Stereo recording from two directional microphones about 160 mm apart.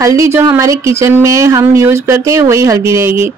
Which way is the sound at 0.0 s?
20° right (ahead or behind).